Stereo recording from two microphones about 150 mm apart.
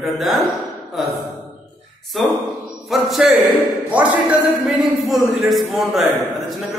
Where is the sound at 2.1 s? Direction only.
Centre (ahead or behind).